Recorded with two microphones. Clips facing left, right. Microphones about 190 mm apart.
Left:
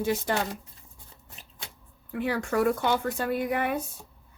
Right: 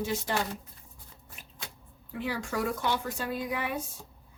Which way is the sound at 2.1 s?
55° left (ahead or behind).